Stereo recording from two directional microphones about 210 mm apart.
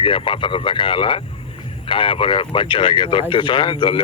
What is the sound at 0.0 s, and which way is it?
Speech, 25° left (ahead or behind).